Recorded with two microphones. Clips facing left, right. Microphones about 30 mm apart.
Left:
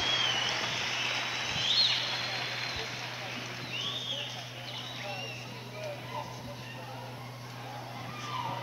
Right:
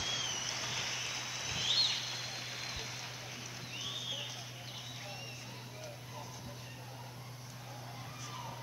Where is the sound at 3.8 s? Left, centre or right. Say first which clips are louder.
Left 5 dB; left.